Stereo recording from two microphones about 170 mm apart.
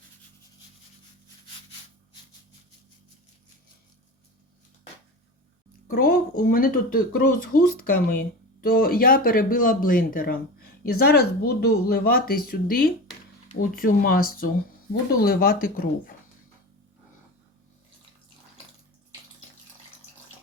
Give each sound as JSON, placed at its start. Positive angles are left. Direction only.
{"t": 5.9, "sound": "speech", "side_deg": 60}